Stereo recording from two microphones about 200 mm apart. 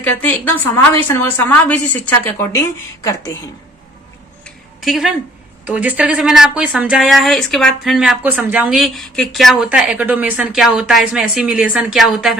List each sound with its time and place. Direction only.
0.0 s a woman's voice: 10° left (ahead or behind)
4.4 s a sound: centre (ahead or behind)
5.6 s speech: 10° right (ahead or behind)